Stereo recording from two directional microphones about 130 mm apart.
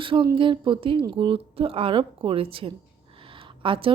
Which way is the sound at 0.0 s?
40° right (ahead or behind).